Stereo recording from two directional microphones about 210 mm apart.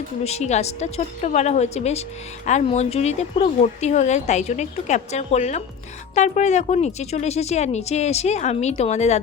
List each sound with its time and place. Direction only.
0.3 s a woman's voice: 30° left (ahead or behind)